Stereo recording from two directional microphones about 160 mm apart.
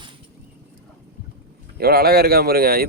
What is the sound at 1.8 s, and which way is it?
Speech, 75° right (ahead or behind).